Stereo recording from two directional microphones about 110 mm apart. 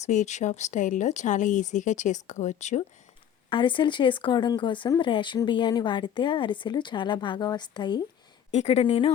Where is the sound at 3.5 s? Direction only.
50° left (ahead or behind).